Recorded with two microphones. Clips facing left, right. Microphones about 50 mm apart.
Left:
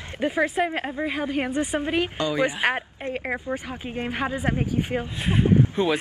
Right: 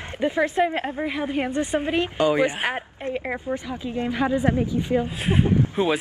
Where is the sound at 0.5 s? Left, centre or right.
Centre.